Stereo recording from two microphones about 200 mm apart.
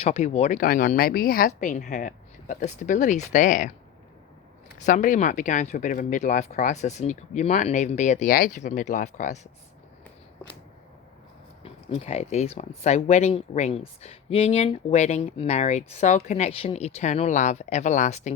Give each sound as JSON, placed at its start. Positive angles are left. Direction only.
{"t": 0.0, "sound": "speech", "side_deg": 30}
{"t": 4.8, "sound": "speech", "side_deg": 40}
{"t": 11.6, "sound": "speech", "side_deg": 30}